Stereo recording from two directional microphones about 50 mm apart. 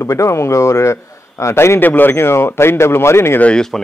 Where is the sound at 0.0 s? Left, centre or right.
Left.